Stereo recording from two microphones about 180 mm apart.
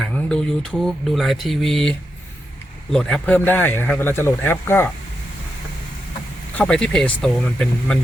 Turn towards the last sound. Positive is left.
turn(degrees=5)  # may be behind; listen again after turning